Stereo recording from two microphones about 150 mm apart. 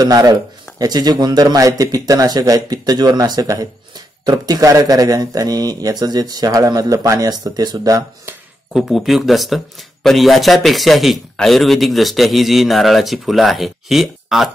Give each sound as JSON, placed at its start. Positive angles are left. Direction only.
{"t": 0.0, "sound": "speech", "side_deg": -25}
{"t": 8.7, "sound": "a man's voice", "side_deg": 0}